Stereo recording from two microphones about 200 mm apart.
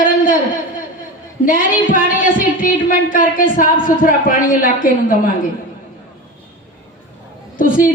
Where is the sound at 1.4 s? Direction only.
45° left (ahead or behind).